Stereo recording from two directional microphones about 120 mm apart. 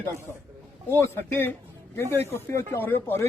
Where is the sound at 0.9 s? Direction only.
20° left (ahead or behind).